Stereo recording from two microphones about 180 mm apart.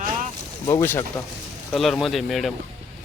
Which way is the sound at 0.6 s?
15° left (ahead or behind).